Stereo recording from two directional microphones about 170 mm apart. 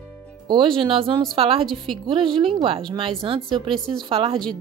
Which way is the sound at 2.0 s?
30° right (ahead or behind).